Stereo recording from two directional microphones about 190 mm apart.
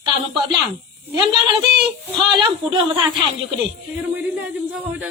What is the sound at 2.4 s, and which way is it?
Speech, 25° right (ahead or behind).